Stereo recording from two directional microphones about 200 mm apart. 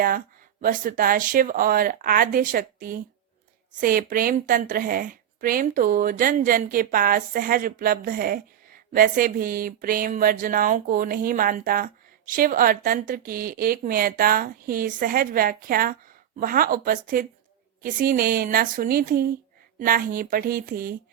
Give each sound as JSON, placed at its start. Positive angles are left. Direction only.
{"t": 0.6, "sound": "a woman's voice", "side_deg": -45}